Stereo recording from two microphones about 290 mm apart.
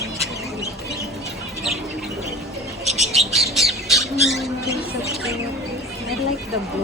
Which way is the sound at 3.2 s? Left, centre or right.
Centre.